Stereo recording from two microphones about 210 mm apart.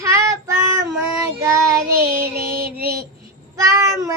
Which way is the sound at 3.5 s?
15° right (ahead or behind).